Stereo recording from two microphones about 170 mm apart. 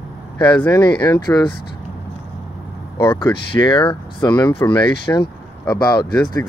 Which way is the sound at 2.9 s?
25° left (ahead or behind).